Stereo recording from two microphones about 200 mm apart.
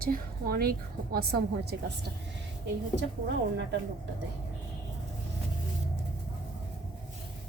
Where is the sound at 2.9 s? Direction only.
60° right (ahead or behind).